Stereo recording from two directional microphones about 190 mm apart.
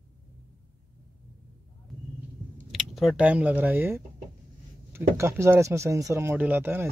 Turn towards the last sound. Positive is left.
turn(degrees=-10)  # may be behind; listen again after turning